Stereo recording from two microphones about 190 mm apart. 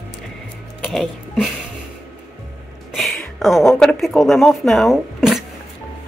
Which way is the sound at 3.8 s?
Centre (ahead or behind).